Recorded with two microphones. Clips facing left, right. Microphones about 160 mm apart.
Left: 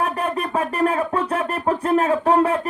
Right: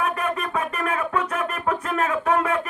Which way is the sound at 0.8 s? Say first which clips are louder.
Left 6 dB; 30° left (ahead or behind).